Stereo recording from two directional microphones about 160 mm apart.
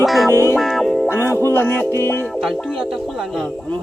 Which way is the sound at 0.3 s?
15° left (ahead or behind).